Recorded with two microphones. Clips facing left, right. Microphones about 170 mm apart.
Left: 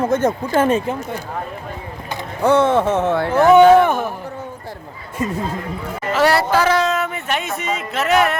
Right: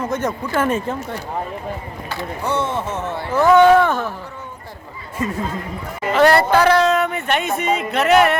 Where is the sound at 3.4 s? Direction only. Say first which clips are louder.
Left 2 dB; 20° left (ahead or behind).